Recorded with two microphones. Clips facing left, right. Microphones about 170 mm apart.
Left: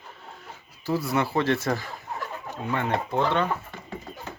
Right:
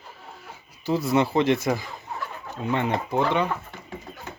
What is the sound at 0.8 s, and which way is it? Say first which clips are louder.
Speech: right 3 dB; 20° right (ahead or behind).